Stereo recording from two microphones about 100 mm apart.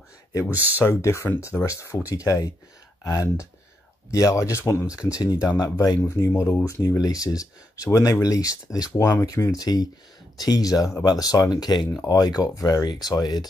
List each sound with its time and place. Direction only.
0.5 s speech: 15° right (ahead or behind)
0.7 s speech: 25° left (ahead or behind); by 13.5 s 40° left (ahead or behind)